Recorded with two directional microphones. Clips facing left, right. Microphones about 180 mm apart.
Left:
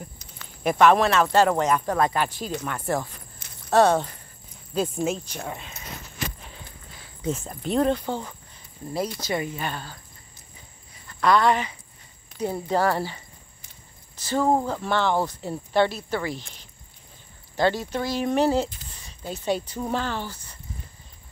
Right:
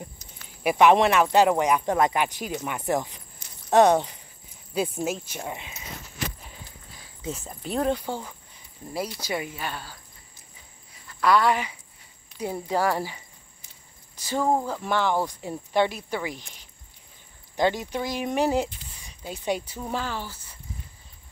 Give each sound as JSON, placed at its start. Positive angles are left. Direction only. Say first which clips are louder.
{"t": 0.7, "sound": "speech", "louder": "even", "side_deg": -15}
{"t": 3.4, "sound": "a sound", "louder": "left 2 dB", "side_deg": 60}
{"t": 3.7, "sound": "speech", "louder": "right 1 dB", "side_deg": -15}
{"t": 7.2, "sound": "speech", "louder": "left 5 dB", "side_deg": 0}
{"t": 11.1, "sound": "speech", "louder": "left 1 dB", "side_deg": -5}
{"t": 12.3, "sound": "a sound", "louder": "left 4 dB", "side_deg": 50}
{"t": 12.6, "sound": "speech", "louder": "left 1 dB", "side_deg": -10}
{"t": 18.9, "sound": "a sound", "louder": "left 3 dB", "side_deg": -10}
{"t": 19.9, "sound": "speech", "louder": "left 2 dB", "side_deg": -5}